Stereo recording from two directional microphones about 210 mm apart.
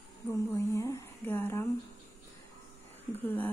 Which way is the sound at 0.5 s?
15° left (ahead or behind).